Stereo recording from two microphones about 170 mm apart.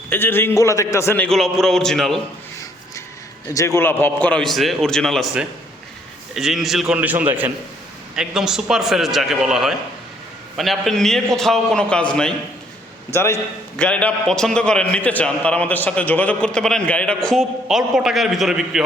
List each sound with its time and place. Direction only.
0.1 s a man's voice: 10° left (ahead or behind)
3.5 s a man's voice: 20° left (ahead or behind)
13.1 s a man's voice: 15° left (ahead or behind); by 18.8 s centre (ahead or behind)